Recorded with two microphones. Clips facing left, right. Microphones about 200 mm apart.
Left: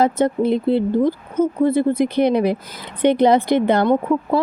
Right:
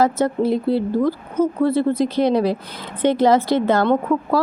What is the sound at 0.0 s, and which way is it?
A woman's voice, 20° left (ahead or behind).